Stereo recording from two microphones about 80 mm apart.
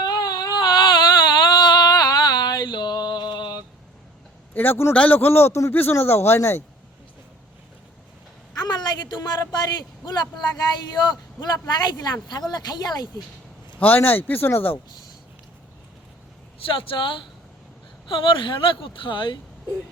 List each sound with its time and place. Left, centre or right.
0.0 s baby cry: left
1.5 s a sound: left
4.5 s speech: left
8.5 s a man's voice: left
13.7 s speech: left
16.6 s speech: left